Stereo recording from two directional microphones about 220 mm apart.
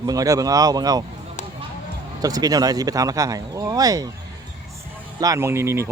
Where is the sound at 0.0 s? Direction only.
15° right (ahead or behind).